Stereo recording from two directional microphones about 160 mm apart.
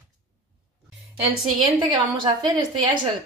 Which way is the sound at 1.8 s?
30° right (ahead or behind).